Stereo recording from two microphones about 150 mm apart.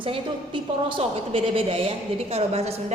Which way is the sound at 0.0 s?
35° right (ahead or behind).